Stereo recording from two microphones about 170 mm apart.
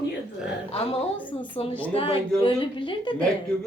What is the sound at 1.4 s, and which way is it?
A woman's voice, 30° left (ahead or behind).